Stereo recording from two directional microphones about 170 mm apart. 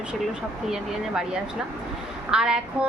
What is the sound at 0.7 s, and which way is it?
Speech, 5° right (ahead or behind).